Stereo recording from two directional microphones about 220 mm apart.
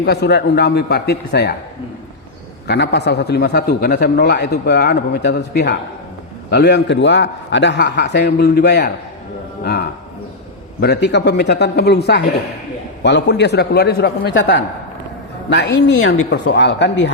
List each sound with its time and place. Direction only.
0.0 s a man's voice: 50° left (ahead or behind)
2.6 s a man's voice: 50° left (ahead or behind)
10.8 s a man's voice: 50° left (ahead or behind)